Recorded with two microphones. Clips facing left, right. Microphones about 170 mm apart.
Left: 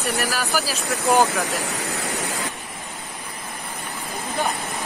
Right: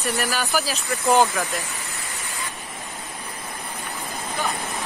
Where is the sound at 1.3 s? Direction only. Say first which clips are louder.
Left 3 dB; 80° left.